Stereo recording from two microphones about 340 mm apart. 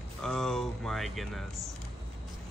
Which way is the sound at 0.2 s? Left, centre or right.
Centre.